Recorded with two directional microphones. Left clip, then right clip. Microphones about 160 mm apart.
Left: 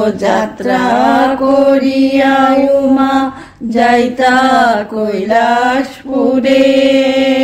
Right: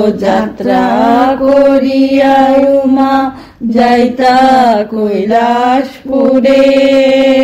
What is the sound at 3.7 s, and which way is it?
Mantra, 15° right (ahead or behind).